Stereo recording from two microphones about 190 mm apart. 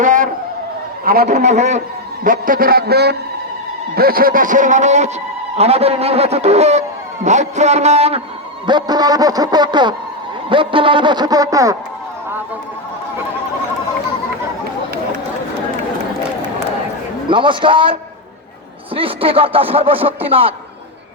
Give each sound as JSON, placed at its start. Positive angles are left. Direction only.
{"t": 0.0, "sound": "a sound", "side_deg": -45}
{"t": 1.0, "sound": "a man's voice", "side_deg": -50}
{"t": 1.4, "sound": "a man's voice", "side_deg": -40}
{"t": 8.6, "sound": "speech", "side_deg": -20}
{"t": 17.2, "sound": "speech", "side_deg": -25}
{"t": 18.9, "sound": "speech", "side_deg": -30}